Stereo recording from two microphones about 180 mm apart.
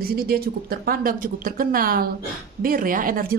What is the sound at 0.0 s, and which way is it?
A woman's voice, 55° right (ahead or behind).